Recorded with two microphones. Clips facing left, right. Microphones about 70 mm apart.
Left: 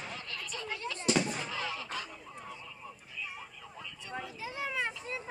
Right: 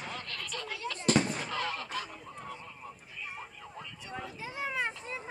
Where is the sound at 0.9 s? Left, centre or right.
Right.